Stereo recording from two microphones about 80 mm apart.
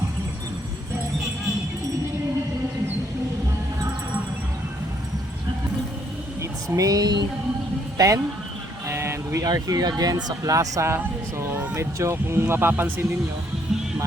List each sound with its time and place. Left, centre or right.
6.4 s speech: right
7.9 s speech: right
8.9 s speech: right